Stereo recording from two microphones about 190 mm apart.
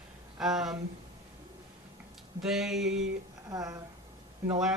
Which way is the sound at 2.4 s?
Centre (ahead or behind).